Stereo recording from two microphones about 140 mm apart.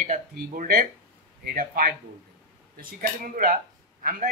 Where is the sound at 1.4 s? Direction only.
90° right.